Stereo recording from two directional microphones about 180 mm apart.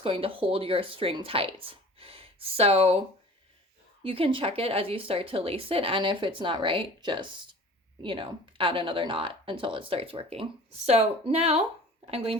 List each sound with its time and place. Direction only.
0.0 s speech: 30° right (ahead or behind)
4.0 s speech: 30° right (ahead or behind)